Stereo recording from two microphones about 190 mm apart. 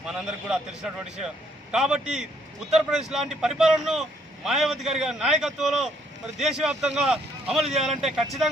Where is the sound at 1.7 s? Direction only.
5° right (ahead or behind).